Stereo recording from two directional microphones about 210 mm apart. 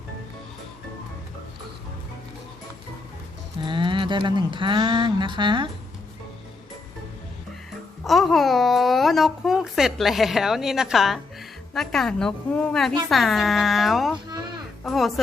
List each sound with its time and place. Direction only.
3.7 s speech: 25° right (ahead or behind)
8.0 s a woman's voice: centre (ahead or behind)